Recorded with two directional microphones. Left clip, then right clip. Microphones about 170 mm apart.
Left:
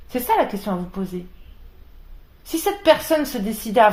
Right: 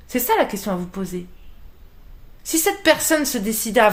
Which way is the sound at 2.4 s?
40° right (ahead or behind).